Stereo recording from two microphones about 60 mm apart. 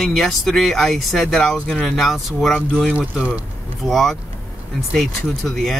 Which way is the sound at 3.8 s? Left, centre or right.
Centre.